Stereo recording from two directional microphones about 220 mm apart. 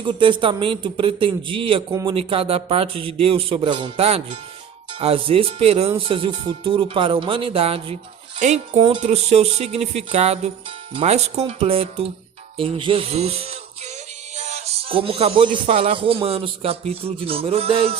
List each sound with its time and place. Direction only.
0.0 s music: 20° right (ahead or behind)
8.4 s speech: 30° right (ahead or behind)
8.8 s music: 25° right (ahead or behind)